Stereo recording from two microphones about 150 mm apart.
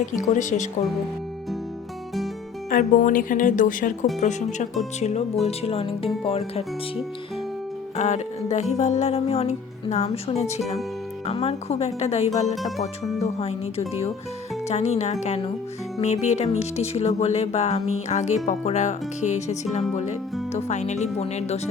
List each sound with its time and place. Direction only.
0.0 s speech: 55° left (ahead or behind)
2.6 s speech: 60° left (ahead or behind)
4.2 s music: 50° left (ahead or behind)
6.2 s speech: 40° left (ahead or behind)
7.9 s music: 50° left (ahead or behind)